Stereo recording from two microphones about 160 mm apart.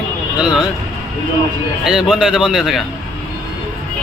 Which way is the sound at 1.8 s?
5° right (ahead or behind).